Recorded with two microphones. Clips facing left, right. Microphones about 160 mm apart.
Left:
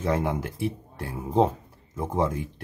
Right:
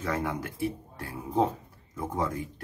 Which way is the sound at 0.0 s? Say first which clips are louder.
Left 5 dB; 25° left (ahead or behind).